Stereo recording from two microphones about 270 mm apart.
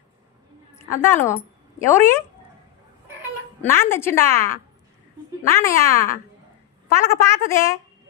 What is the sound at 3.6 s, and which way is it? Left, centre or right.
Speech, centre.